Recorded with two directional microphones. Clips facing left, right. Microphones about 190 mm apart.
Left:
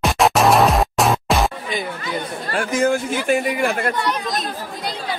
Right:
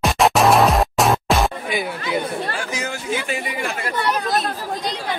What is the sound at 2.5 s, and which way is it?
Speech, 55° left (ahead or behind).